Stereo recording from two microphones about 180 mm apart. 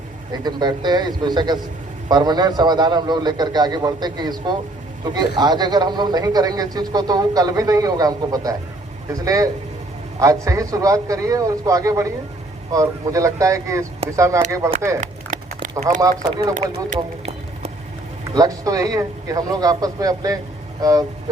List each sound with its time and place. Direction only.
0.4 s a man's voice: 25° right (ahead or behind)
15.0 s a sound: 45° right (ahead or behind)
16.0 s a man's voice: 20° right (ahead or behind)
16.6 s run: 40° right (ahead or behind)
18.3 s a man's voice: 20° right (ahead or behind)